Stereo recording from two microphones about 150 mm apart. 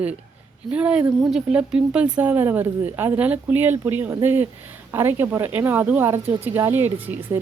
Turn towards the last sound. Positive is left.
turn(degrees=-15)  # may be behind; listen again after turning